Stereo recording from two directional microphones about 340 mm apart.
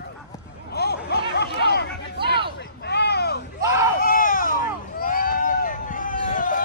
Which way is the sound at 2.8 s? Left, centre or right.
Left.